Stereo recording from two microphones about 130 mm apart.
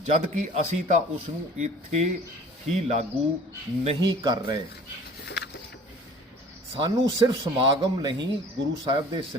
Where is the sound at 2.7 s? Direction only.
55° right (ahead or behind).